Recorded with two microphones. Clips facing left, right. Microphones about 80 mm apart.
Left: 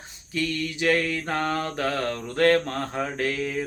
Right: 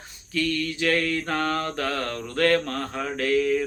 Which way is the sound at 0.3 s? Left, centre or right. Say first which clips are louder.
Right 2 dB; centre.